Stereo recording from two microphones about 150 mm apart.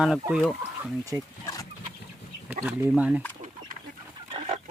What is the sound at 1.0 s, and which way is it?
Speech, 25° right (ahead or behind).